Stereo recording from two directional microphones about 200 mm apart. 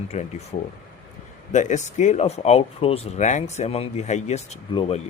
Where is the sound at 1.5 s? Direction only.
35° left (ahead or behind).